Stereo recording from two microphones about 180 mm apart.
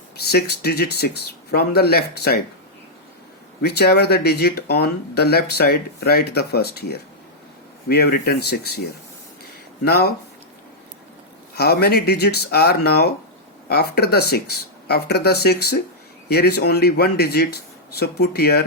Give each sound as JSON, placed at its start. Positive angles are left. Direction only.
{"t": 0.3, "sound": "speech", "side_deg": 60}
{"t": 3.6, "sound": "speech", "side_deg": 65}
{"t": 9.8, "sound": "speech", "side_deg": 60}
{"t": 11.5, "sound": "speech", "side_deg": 60}